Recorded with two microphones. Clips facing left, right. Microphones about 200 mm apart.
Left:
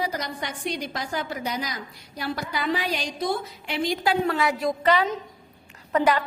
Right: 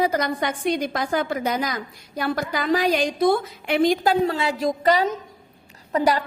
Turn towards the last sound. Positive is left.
turn(degrees=-35)  # may be behind; listen again after turning